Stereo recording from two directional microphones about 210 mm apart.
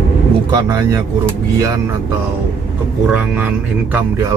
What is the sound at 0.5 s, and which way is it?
Speech, 15° right (ahead or behind).